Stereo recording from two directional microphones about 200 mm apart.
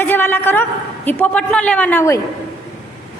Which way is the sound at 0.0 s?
10° left (ahead or behind).